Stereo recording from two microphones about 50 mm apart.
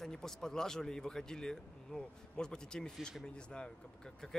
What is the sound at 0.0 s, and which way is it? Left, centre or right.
A man's voice, centre.